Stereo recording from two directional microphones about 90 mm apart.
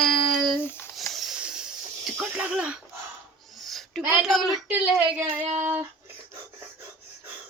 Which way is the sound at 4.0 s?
15° right (ahead or behind).